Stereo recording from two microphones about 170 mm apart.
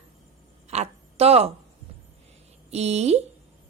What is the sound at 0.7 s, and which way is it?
Speech, 40° right (ahead or behind).